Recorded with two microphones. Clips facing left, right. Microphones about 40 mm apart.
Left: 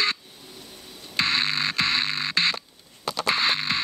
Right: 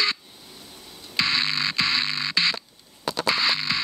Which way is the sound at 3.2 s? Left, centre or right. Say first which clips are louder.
Even; left.